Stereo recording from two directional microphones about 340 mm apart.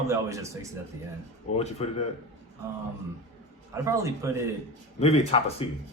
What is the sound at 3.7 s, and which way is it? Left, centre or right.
Speech, centre.